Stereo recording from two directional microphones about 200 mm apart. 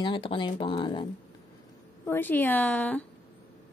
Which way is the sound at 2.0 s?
10° left (ahead or behind).